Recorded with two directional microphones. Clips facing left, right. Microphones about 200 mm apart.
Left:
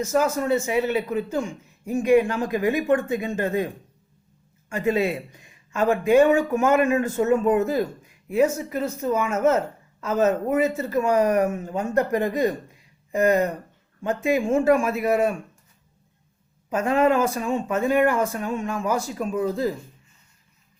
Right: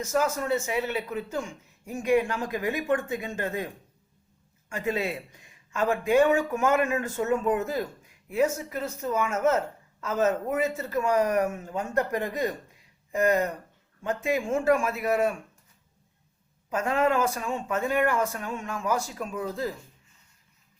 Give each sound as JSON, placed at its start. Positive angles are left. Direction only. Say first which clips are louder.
{"t": 0.0, "sound": "speech", "louder": "left 5 dB", "side_deg": 20}
{"t": 4.7, "sound": "speech", "louder": "left 6 dB", "side_deg": 15}
{"t": 16.7, "sound": "speech", "louder": "left 5 dB", "side_deg": 20}